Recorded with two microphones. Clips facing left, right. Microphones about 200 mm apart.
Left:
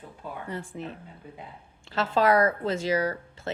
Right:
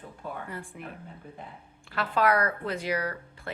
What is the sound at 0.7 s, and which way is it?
Speech, 25° left (ahead or behind).